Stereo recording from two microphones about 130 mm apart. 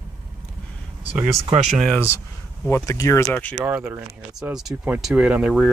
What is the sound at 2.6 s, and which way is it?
Speech, 20° left (ahead or behind).